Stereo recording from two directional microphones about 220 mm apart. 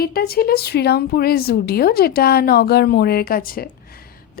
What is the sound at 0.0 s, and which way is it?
A woman's voice, 45° left (ahead or behind).